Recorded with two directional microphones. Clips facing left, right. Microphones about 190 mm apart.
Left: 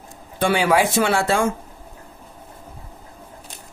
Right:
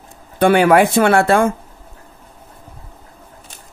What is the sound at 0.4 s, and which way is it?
Speech, 55° right (ahead or behind).